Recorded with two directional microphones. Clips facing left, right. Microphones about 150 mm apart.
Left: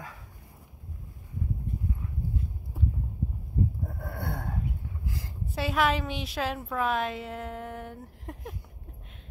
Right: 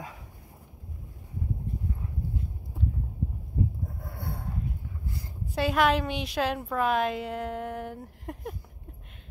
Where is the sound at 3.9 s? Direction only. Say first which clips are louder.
Left 3 dB; 65° left (ahead or behind).